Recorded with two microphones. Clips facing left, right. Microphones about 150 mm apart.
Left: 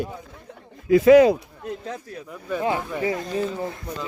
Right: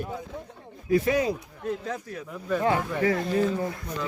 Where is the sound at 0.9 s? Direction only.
90° left.